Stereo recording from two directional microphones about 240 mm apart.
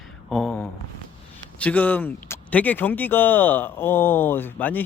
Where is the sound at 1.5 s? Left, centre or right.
Centre.